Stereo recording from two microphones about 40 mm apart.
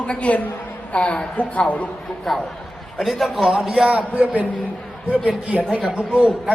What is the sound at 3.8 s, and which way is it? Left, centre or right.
Speech, right.